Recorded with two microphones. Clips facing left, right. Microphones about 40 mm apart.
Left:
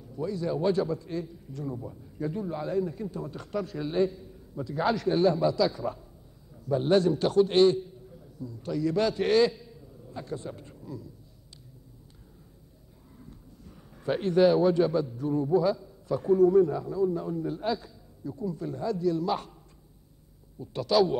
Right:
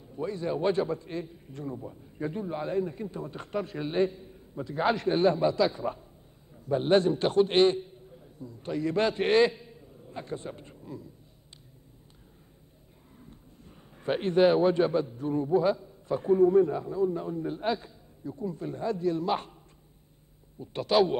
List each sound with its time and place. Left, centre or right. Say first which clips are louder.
0.0 s a man's voice: left 1 dB; right
1.8 s speech: left 1 dB; centre
2.1 s a man's voice: left 1 dB; right
13.3 s a man's voice: left 2 dB; right